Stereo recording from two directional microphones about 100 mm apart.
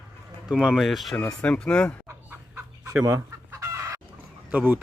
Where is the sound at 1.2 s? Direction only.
10° left (ahead or behind).